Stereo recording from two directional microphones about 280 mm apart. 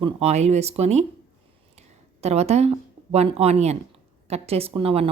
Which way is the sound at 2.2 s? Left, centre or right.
Right.